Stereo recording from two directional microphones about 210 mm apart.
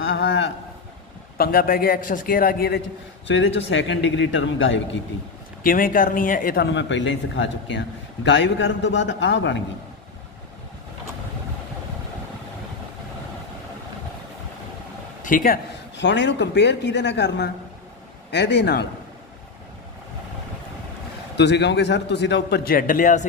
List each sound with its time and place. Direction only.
0.0 s a sound: 60° left (ahead or behind)
1.4 s a man's voice: 45° left (ahead or behind)
3.3 s speech: 60° left (ahead or behind)
5.6 s speech: 40° left (ahead or behind); by 9.6 s 60° left (ahead or behind)
15.2 s speech: 40° left (ahead or behind)
21.4 s a man's voice: 55° left (ahead or behind); by 23.2 s 40° left (ahead or behind)